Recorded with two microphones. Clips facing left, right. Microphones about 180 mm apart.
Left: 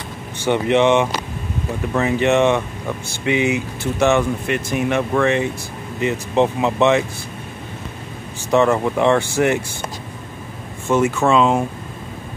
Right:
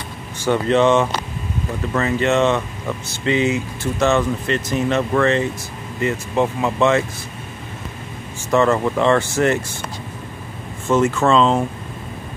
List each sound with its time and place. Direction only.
0.5 s speech: 15° left (ahead or behind)
8.5 s speech: 15° left (ahead or behind)
10.9 s speech: 10° left (ahead or behind)